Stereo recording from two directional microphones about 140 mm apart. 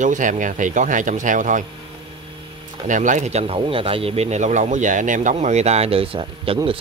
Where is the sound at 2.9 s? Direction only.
65° right (ahead or behind).